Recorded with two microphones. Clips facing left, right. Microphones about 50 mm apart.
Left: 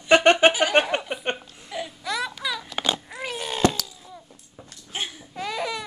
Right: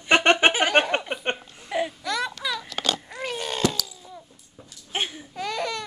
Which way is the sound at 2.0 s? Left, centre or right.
Centre.